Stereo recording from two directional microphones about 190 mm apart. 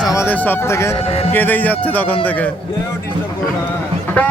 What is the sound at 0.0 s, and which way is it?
Speech, 15° left (ahead or behind).